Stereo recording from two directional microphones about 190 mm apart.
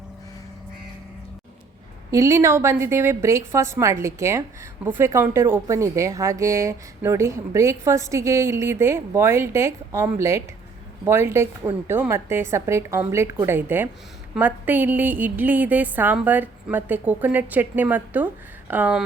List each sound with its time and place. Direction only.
2.0 s a woman's voice: 15° right (ahead or behind)